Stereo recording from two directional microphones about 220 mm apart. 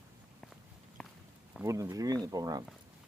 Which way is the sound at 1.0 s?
5° left (ahead or behind).